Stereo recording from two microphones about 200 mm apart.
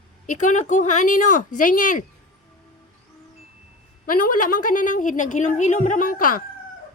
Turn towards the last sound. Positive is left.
turn(degrees=45)  # may be behind; listen again after turning